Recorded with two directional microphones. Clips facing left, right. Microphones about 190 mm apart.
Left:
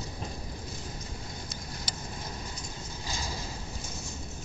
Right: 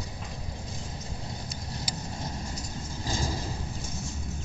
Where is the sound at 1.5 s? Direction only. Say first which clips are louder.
Right 3 dB; 35° right (ahead or behind).